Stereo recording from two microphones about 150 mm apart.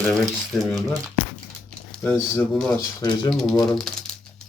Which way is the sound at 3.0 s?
25° left (ahead or behind).